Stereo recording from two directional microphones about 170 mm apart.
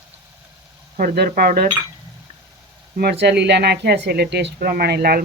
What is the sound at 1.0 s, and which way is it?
Speech, 60° right (ahead or behind).